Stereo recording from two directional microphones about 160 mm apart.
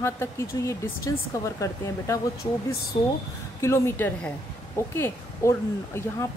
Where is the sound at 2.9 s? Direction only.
35° left (ahead or behind).